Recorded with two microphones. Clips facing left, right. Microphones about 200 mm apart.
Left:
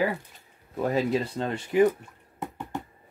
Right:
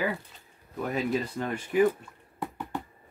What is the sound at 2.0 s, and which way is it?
Drip, 20° left (ahead or behind).